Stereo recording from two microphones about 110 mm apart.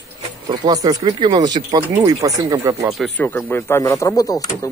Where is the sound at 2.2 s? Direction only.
30° right (ahead or behind).